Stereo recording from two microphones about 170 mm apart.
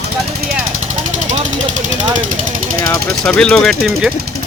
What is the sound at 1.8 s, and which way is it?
Speech, 50° right (ahead or behind).